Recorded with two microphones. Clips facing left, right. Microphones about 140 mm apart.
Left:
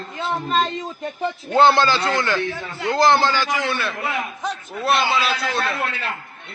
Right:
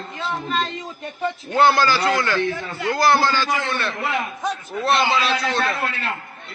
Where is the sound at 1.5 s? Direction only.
25° left (ahead or behind).